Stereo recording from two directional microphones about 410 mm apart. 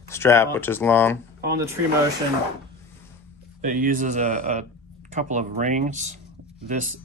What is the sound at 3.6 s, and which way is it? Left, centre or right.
Speech, centre.